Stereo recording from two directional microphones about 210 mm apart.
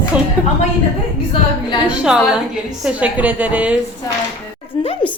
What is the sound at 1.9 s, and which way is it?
A woman's voice, 5° right (ahead or behind).